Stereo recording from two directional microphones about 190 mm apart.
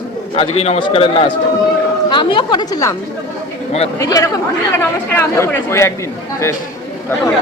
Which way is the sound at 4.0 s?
20° left (ahead or behind).